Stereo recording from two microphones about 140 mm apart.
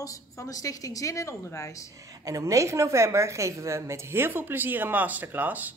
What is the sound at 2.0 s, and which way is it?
A woman's voice, 25° right (ahead or behind).